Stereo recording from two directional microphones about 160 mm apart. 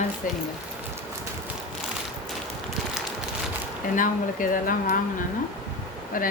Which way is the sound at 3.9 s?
55° left (ahead or behind).